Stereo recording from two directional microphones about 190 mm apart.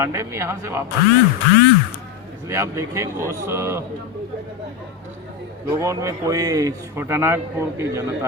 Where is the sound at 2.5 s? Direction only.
15° right (ahead or behind).